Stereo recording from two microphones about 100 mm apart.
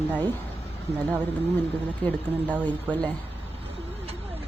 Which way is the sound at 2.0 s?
10° left (ahead or behind).